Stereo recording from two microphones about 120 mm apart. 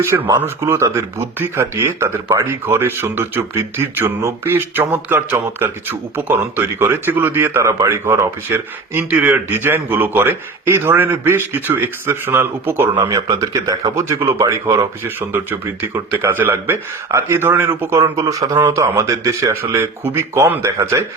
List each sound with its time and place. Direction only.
0.0 s speech: 20° right (ahead or behind)
15.3 s speech: 15° right (ahead or behind)